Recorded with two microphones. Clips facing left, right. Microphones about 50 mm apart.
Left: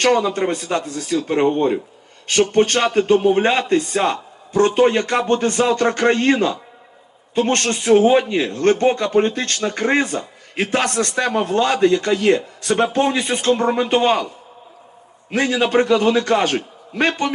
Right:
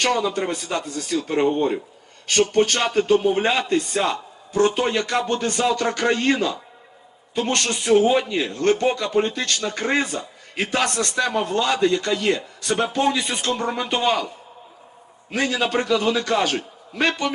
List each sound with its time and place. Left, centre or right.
0.0 s a man's voice: left
1.4 s a man's voice: left
2.5 s a man's voice: left
15.4 s a man's voice: left